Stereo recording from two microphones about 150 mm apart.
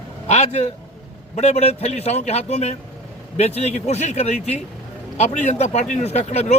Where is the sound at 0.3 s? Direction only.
50° left (ahead or behind).